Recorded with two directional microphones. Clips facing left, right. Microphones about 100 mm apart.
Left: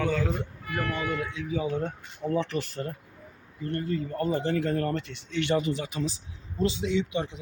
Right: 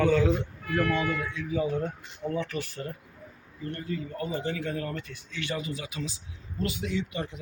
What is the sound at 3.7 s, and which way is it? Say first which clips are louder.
Speech: left 5 dB; 45° left (ahead or behind).